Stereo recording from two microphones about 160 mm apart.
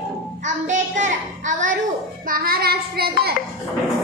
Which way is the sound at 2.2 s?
65° right (ahead or behind).